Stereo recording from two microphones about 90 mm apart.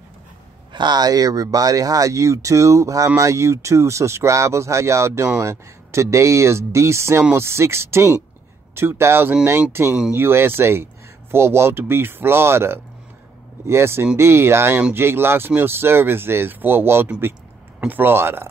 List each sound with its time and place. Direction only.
0.7 s speech: 50° right (ahead or behind); by 18.5 s 25° right (ahead or behind)